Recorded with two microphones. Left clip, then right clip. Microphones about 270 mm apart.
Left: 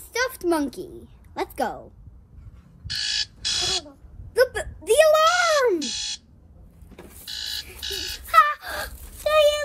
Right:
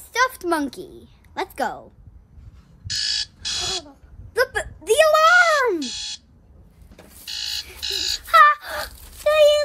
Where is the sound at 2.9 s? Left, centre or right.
Centre.